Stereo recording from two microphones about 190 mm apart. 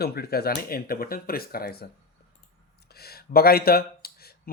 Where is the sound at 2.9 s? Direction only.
55° left (ahead or behind).